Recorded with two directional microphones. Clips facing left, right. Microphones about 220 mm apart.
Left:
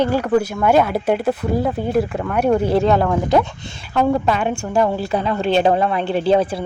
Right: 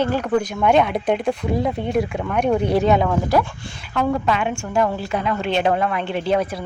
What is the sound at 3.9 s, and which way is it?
A woman's voice, 35° left (ahead or behind).